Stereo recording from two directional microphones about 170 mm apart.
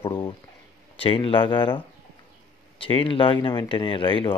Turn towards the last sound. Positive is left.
turn(degrees=30)  # may be behind; listen again after turning